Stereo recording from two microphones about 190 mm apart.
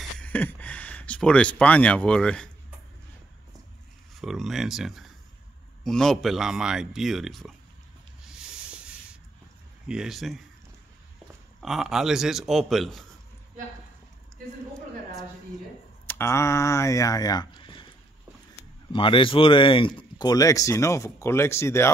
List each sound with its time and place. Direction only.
0.2 s a sound: 10° left (ahead or behind)
4.2 s speech: centre (ahead or behind)
8.2 s sanding: 5° right (ahead or behind)
9.8 s speech: 5° right (ahead or behind)
11.6 s speech: centre (ahead or behind)
16.1 s speech: 15° left (ahead or behind)